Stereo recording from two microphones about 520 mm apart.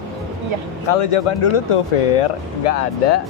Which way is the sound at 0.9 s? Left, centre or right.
Left.